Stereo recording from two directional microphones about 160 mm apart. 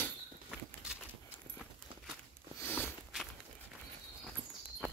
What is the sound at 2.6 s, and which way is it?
Walk, 10° left (ahead or behind).